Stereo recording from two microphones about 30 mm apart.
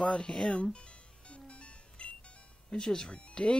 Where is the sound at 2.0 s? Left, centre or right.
Left.